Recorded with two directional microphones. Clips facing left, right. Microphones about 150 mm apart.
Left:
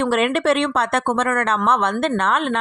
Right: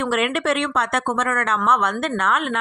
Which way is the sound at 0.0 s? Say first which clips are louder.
Left 3 dB; 30° left (ahead or behind).